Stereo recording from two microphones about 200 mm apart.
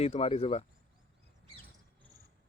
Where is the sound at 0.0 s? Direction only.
30° left (ahead or behind).